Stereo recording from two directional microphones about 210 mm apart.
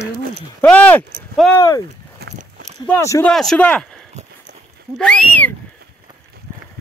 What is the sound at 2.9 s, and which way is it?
Speech, 15° left (ahead or behind).